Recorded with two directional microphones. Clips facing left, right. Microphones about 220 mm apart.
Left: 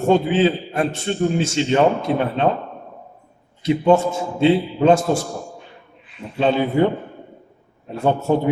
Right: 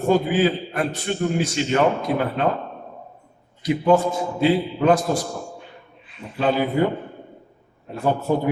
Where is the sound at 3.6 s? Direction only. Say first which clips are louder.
Left 2 dB; 25° left (ahead or behind).